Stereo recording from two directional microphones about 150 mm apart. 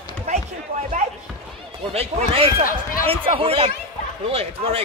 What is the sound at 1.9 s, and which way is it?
Speech, 40° right (ahead or behind).